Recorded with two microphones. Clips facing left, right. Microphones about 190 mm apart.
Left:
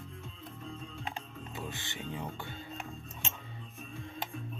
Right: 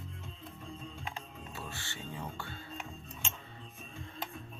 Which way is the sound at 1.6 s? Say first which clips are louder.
Left 4 dB; 20° left (ahead or behind).